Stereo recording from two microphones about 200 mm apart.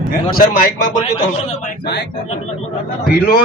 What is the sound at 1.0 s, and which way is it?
Speech, 30° left (ahead or behind).